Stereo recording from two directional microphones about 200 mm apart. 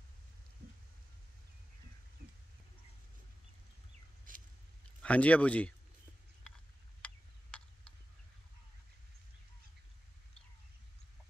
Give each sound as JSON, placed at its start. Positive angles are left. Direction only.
{"t": 4.3, "sound": "a sound", "side_deg": -40}
{"t": 5.0, "sound": "speech", "side_deg": 5}
{"t": 7.0, "sound": "tick-tock", "side_deg": 5}